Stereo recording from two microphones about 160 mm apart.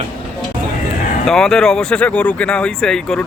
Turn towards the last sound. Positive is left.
turn(degrees=5)  # may be behind; listen again after turning